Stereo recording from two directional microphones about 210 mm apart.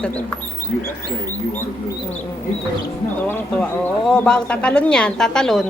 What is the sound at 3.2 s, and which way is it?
Speech, 5° left (ahead or behind).